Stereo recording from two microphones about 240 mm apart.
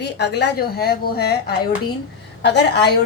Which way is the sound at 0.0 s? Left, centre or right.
Left.